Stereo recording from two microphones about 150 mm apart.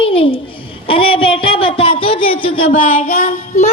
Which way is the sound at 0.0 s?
40° left (ahead or behind).